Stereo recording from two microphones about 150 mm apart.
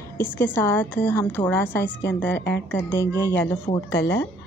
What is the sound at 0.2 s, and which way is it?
A woman's voice, 15° left (ahead or behind).